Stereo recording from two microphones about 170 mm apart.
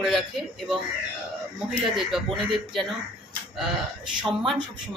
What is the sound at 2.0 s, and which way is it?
Speech, centre (ahead or behind).